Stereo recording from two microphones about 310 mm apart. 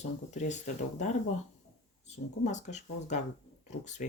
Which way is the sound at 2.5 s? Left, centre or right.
Left.